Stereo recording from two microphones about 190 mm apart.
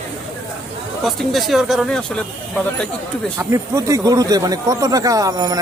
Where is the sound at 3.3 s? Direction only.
15° right (ahead or behind).